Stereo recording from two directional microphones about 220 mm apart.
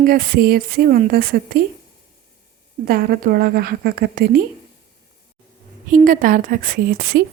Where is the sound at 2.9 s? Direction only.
45° right (ahead or behind).